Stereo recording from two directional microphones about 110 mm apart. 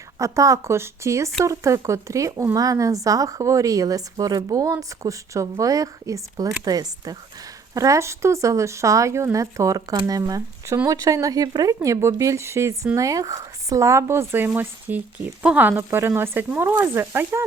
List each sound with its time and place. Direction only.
0.2 s speech: 30° right (ahead or behind)